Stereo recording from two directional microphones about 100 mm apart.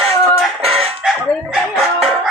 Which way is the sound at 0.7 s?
75° right (ahead or behind).